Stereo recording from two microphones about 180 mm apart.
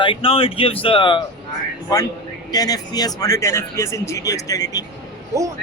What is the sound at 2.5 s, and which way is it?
Speech, 20° left (ahead or behind).